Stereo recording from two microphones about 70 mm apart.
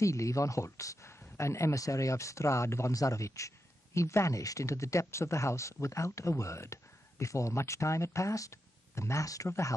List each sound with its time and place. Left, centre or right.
0.0 s speech: left